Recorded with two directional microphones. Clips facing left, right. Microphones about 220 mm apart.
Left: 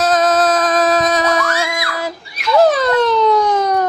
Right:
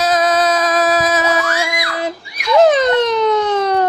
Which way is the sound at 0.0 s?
5° right (ahead or behind).